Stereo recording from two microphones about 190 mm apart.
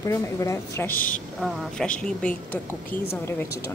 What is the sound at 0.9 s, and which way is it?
Speech, 45° left (ahead or behind).